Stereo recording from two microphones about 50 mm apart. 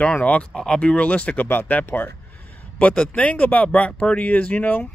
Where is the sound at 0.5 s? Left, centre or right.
Centre; by 2.1 s left.